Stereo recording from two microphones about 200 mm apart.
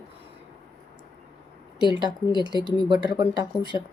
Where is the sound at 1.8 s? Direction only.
20° left (ahead or behind).